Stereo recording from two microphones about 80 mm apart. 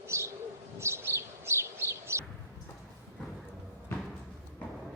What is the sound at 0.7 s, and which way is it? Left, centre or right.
Bird, right.